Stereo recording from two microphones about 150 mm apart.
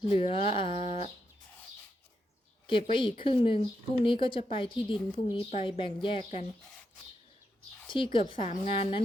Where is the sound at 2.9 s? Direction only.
35° left (ahead or behind).